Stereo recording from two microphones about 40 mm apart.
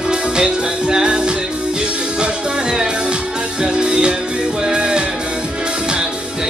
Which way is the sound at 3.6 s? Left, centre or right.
Right.